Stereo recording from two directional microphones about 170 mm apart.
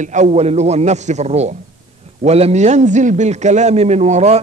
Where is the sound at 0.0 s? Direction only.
45° right (ahead or behind).